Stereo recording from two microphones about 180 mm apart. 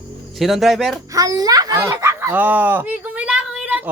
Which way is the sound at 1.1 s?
20° right (ahead or behind).